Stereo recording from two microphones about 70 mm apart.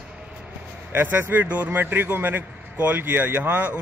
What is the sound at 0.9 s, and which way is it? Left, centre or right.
A man's voice, right.